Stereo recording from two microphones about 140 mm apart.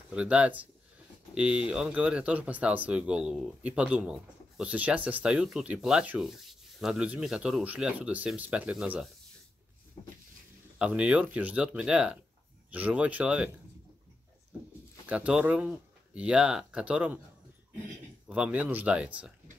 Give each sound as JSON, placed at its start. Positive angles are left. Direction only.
{"t": 0.1, "sound": "speech", "side_deg": -10}
{"t": 10.0, "sound": "a sound", "side_deg": 35}
{"t": 10.8, "sound": "speech", "side_deg": -10}
{"t": 15.0, "sound": "speech", "side_deg": -10}
{"t": 18.3, "sound": "speech", "side_deg": -10}